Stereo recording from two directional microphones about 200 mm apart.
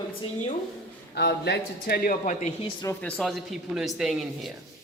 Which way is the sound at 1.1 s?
55° left (ahead or behind).